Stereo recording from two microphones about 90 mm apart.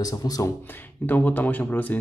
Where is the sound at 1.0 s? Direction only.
20° left (ahead or behind).